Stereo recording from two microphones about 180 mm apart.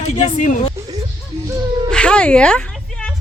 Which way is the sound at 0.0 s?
40° left (ahead or behind).